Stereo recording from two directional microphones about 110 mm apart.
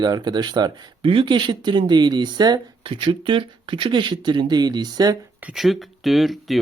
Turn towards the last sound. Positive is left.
turn(degrees=0)  # may be behind; listen again after turning